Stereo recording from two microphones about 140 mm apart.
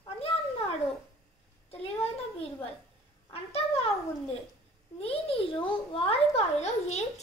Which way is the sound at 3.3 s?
45° left (ahead or behind).